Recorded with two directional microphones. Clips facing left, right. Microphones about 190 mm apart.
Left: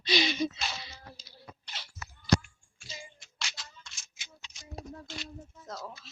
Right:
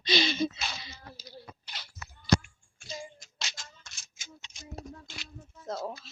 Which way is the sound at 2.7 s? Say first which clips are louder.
Right 7 dB; 50° right (ahead or behind).